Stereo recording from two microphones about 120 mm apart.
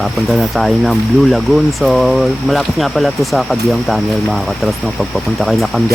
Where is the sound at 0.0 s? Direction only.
Centre (ahead or behind).